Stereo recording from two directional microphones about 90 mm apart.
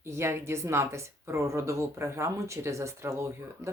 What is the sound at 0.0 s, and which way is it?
Speech, 30° right (ahead or behind).